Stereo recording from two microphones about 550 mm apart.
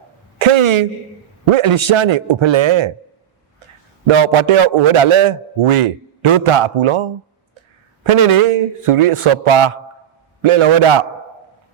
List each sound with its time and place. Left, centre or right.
0.3 s a sound: right
1.5 s a man's voice: right
4.0 s a man's voice: right